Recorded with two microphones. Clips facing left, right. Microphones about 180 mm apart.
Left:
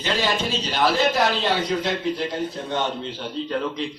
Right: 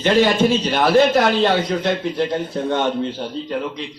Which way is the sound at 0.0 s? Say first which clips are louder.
Right 9 dB; 55° right (ahead or behind).